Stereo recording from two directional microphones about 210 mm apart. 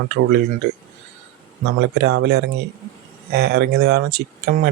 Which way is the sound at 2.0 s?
50° right (ahead or behind).